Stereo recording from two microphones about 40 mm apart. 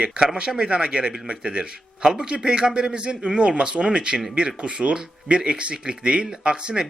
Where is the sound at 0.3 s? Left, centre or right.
Right.